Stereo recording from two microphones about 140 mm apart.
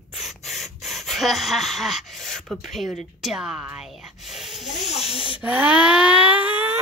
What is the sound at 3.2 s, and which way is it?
Snake, 5° right (ahead or behind).